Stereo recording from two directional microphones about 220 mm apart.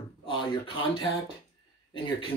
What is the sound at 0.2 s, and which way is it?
Speech, 25° left (ahead or behind).